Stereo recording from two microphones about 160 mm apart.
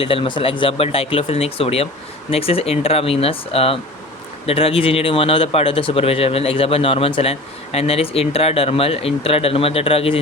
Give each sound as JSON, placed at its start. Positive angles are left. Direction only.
{"t": 0.0, "sound": "speech", "side_deg": 35}